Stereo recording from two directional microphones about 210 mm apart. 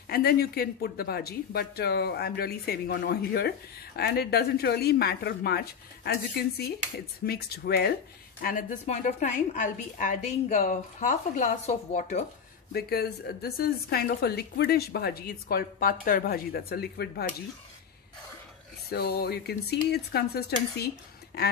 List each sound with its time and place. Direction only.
0.1 s a woman's voice: 45° left (ahead or behind)
12.7 s speech: 50° left (ahead or behind)
18.9 s speech: 45° left (ahead or behind)